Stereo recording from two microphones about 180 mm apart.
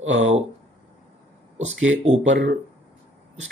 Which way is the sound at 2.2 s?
90° right.